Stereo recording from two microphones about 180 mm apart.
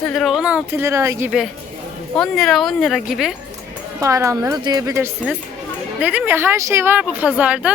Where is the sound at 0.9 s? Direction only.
15° right (ahead or behind).